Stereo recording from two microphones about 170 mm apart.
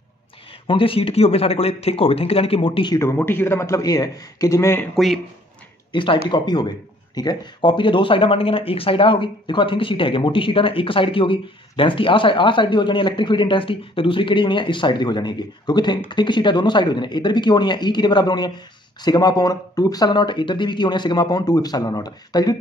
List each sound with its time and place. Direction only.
0.7 s speech: 30° left (ahead or behind)
3.0 s a man's voice: 15° left (ahead or behind)
4.9 s speech: centre (ahead or behind)
5.9 s a sound: 30° left (ahead or behind)
6.3 s speech: 25° left (ahead or behind)